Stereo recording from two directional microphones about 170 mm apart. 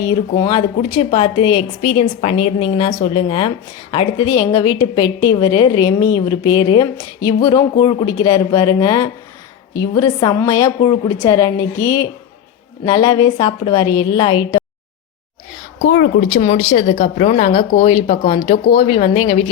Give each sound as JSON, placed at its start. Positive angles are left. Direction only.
{"t": 0.0, "sound": "a woman's voice", "side_deg": 25}
{"t": 16.3, "sound": "speech", "side_deg": 40}